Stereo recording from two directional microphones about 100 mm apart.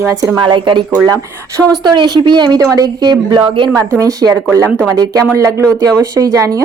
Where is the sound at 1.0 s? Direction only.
35° right (ahead or behind).